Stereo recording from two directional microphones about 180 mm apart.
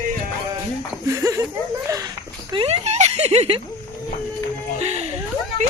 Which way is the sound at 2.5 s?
30° right (ahead or behind).